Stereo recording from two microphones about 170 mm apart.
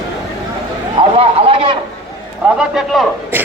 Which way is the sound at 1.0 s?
30° right (ahead or behind).